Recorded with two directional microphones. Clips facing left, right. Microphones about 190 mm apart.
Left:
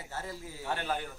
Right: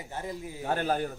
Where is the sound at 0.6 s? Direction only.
40° right (ahead or behind).